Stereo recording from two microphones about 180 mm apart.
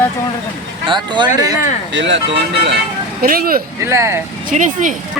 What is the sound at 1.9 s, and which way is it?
Speech, 90° right.